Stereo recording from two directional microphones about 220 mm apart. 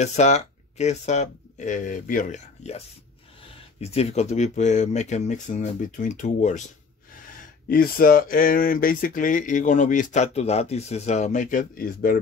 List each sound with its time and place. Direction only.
0.0 s speech: 30° left (ahead or behind)
3.8 s speech: 30° left (ahead or behind)
7.7 s speech: 40° left (ahead or behind)